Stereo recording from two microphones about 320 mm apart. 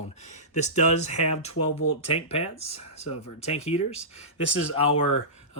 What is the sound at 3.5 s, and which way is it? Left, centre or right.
Speech, centre.